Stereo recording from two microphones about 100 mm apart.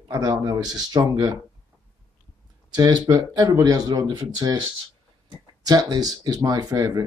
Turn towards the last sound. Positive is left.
turn(degrees=-35)  # may be behind; listen again after turning